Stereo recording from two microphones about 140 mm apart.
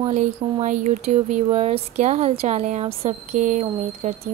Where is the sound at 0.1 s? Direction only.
60° right (ahead or behind).